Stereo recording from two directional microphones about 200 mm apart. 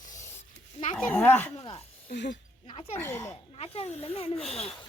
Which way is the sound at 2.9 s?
10° left (ahead or behind).